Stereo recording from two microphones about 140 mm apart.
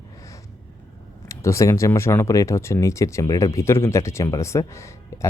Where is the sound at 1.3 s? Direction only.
20° left (ahead or behind).